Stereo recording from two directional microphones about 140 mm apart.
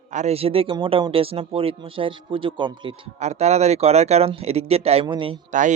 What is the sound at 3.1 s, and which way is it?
Speech, 55° right (ahead or behind).